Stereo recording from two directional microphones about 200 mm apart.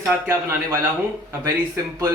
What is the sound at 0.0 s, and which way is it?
A man's voice, 10° right (ahead or behind).